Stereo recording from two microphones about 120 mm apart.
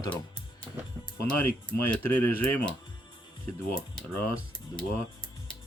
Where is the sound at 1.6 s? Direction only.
10° left (ahead or behind).